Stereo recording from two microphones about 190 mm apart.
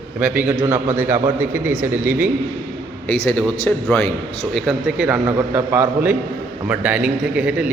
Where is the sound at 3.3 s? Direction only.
5° left (ahead or behind).